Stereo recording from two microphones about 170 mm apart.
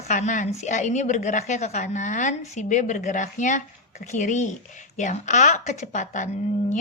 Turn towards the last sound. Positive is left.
turn(degrees=40)  # may be behind; listen again after turning